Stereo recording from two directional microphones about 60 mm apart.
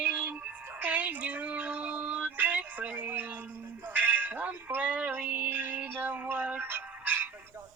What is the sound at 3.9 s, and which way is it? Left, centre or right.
Speech, right.